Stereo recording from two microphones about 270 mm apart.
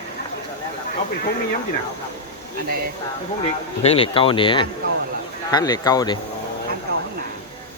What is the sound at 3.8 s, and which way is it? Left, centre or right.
Speech, left.